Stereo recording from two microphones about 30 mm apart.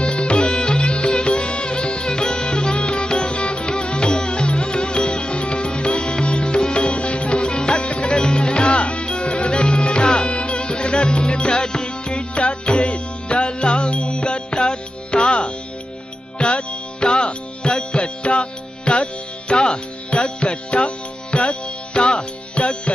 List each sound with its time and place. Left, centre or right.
0.0 s music: left
7.4 s music: left
12.8 s music: left
14.0 s music: left
16.3 s music: left
17.6 s music: left
18.2 s music: left
20.4 s music: left